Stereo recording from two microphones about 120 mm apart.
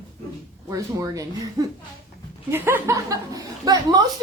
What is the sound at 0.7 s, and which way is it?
A woman's voice, 30° right (ahead or behind).